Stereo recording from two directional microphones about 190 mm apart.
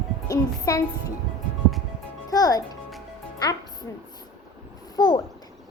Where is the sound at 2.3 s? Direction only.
20° left (ahead or behind).